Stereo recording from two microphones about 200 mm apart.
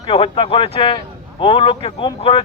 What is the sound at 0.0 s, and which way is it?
Speech, 25° left (ahead or behind).